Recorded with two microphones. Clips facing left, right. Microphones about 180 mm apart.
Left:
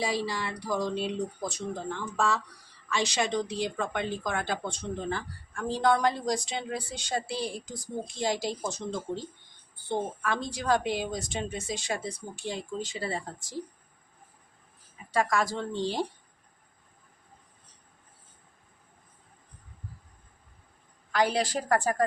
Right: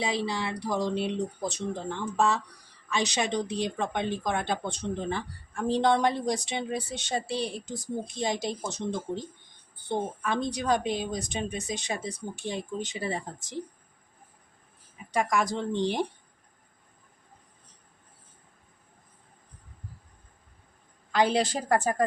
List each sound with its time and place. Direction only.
0.0 s speech: 20° right (ahead or behind)
10.5 s speech: 20° right (ahead or behind)
15.1 s speech: 20° right (ahead or behind)
21.1 s speech: 25° right (ahead or behind)